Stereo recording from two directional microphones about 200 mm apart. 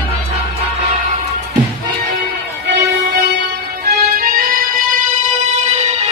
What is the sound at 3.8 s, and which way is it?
Music, 50° right (ahead or behind).